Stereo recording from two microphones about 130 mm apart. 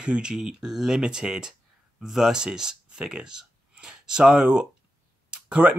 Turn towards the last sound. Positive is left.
turn(degrees=-10)  # may be behind; listen again after turning